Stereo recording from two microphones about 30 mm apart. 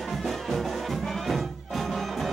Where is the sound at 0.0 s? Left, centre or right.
Centre.